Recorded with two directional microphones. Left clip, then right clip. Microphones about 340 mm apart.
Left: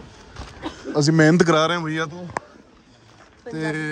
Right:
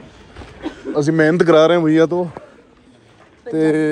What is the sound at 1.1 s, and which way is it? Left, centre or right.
Speech, centre.